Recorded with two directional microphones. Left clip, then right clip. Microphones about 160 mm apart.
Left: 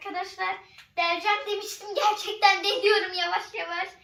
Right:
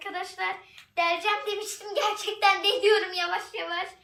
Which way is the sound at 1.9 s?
Centre (ahead or behind).